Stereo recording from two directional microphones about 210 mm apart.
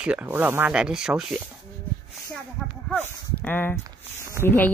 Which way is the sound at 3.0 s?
10° left (ahead or behind).